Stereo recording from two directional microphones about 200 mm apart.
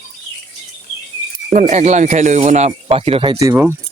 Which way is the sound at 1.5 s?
35° right (ahead or behind).